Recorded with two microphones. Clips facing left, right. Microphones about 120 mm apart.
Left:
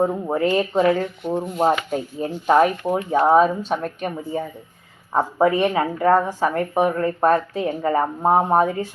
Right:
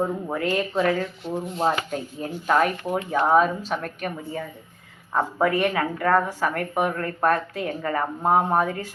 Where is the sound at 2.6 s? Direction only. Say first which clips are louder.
Left 5 dB; 25° left (ahead or behind).